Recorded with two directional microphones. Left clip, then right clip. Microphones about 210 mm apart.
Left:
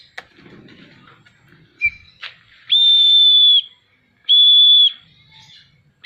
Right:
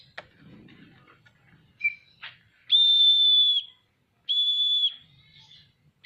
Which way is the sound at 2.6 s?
10° left (ahead or behind).